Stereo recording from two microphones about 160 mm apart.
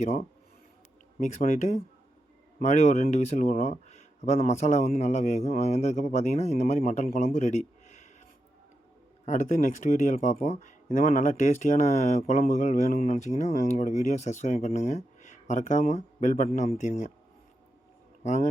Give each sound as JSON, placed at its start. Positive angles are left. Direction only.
{"t": 0.0, "sound": "speech", "side_deg": 45}
{"t": 7.3, "sound": "a sound", "side_deg": 50}
{"t": 9.2, "sound": "speech", "side_deg": 50}